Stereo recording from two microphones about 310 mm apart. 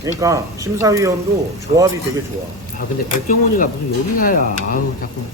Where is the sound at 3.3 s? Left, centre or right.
Left.